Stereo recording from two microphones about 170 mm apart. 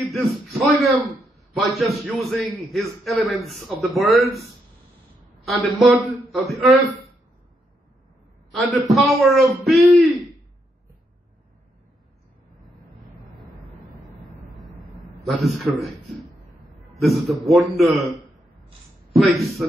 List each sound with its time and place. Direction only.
0.1 s a sound: centre (ahead or behind)
1.5 s a man's voice: centre (ahead or behind)
5.5 s a man's voice: centre (ahead or behind)
8.5 s a man's voice: centre (ahead or behind)
15.2 s a man's voice: centre (ahead or behind)
19.1 s a man's voice: centre (ahead or behind)